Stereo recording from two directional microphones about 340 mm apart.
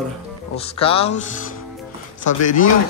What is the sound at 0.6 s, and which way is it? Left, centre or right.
Speech, centre.